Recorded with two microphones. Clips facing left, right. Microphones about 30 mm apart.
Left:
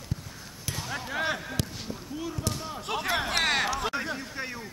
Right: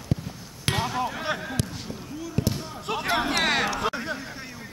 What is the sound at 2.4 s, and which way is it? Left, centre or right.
Basketball bounce, right.